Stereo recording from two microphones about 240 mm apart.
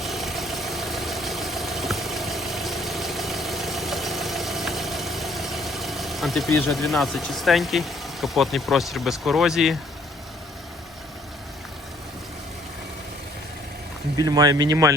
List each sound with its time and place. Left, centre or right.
0.0 s vehicle: centre
14.2 s speech: centre